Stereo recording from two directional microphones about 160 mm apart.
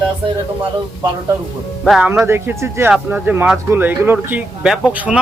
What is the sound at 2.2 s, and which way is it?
Speech, 15° right (ahead or behind).